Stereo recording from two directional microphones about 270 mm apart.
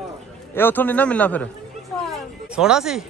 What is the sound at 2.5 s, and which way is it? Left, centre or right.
Speech, centre.